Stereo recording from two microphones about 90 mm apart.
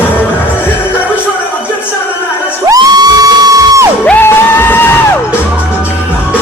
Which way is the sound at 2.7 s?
50° right (ahead or behind).